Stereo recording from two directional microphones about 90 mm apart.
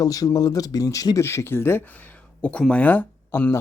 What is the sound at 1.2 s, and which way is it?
Speech, 25° left (ahead or behind).